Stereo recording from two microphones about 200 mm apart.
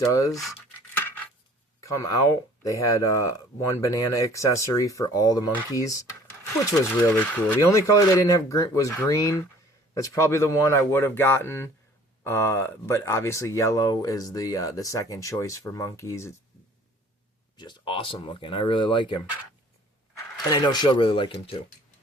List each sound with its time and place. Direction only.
0.1 s speech: 15° left (ahead or behind)
0.9 s cutlery: 10° left (ahead or behind)
1.8 s speech: 15° left (ahead or behind)
17.6 s speech: 25° left (ahead or behind)
20.5 s speech: 20° left (ahead or behind)